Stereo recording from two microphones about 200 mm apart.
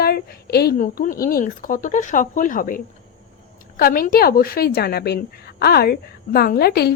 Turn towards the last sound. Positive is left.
turn(degrees=50)  # may be behind; listen again after turning